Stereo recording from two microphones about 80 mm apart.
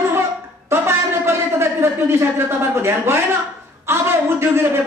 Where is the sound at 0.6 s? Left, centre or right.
Right.